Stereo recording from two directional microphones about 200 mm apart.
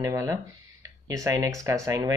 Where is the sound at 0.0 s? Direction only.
15° right (ahead or behind).